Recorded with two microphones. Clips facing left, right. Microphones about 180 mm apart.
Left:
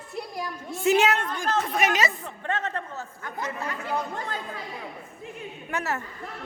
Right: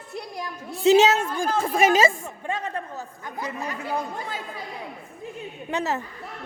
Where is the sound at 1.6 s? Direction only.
30° right (ahead or behind).